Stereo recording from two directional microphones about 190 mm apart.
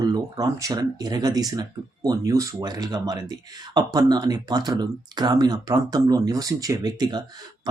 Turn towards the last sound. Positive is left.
turn(degrees=-20)  # may be behind; listen again after turning